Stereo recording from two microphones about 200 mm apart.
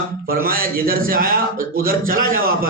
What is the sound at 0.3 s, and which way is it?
A man's voice, 45° right (ahead or behind).